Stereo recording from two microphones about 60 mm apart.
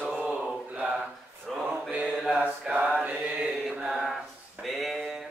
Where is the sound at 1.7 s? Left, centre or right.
Right.